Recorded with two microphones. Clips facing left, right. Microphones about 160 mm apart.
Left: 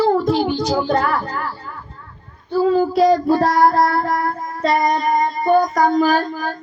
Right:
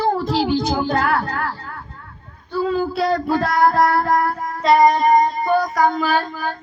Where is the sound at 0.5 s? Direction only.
50° right (ahead or behind).